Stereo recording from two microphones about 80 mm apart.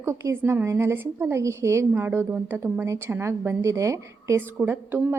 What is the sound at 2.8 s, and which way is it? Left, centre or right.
A woman's voice, right.